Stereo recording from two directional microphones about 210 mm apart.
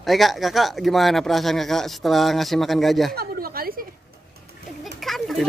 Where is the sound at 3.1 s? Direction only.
45° right (ahead or behind).